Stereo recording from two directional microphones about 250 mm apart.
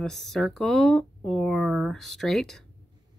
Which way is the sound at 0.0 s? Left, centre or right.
Centre.